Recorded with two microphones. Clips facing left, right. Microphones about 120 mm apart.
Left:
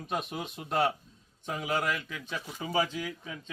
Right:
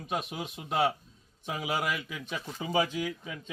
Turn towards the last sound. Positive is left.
turn(degrees=-20)  # may be behind; listen again after turning